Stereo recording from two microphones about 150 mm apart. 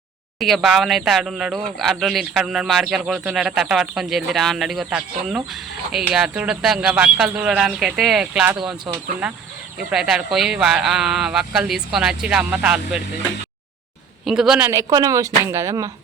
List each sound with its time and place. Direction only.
0.3 s a man's voice: centre (ahead or behind)
14.3 s a man's voice: 5° right (ahead or behind)
14.7 s speech: 20° right (ahead or behind)